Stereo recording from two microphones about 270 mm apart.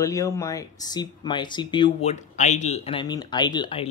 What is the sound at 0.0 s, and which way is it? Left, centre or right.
Speech, centre.